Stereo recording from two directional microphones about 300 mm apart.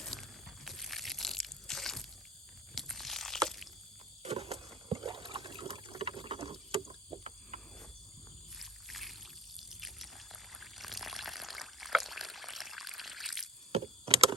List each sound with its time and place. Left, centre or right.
0.0 s a sound: centre
4.2 s water: centre
8.5 s boat: centre
9.6 s a sound: centre
10.5 s pour: centre
13.7 s vehicle: centre